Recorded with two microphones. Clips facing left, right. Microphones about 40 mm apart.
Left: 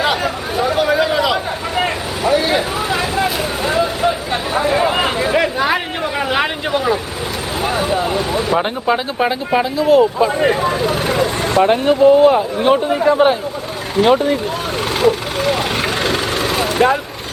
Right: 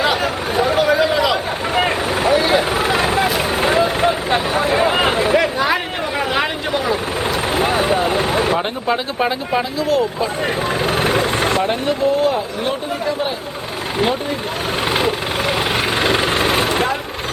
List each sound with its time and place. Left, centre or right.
0.0 s a sound: centre
2.3 s vehicle: centre
2.9 s vehicle: right
4.6 s a sound: centre
5.3 s vehicle: centre
7.5 s vehicle: centre
8.2 s vehicle: right
8.5 s speech: centre
10.6 s speech: centre
10.8 s vehicle: right
11.6 s speech: left
13.1 s speech: left
14.9 s vehicle: centre